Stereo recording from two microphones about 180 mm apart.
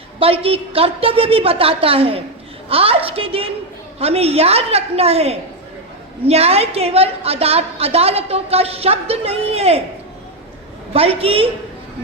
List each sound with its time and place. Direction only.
0.2 s a woman's voice: 30° right (ahead or behind)
10.9 s a woman's voice: 30° right (ahead or behind)